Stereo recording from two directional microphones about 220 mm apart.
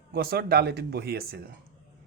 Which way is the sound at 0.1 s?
45° right (ahead or behind).